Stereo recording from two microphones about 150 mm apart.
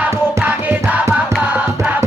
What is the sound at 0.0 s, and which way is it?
Music, 15° right (ahead or behind).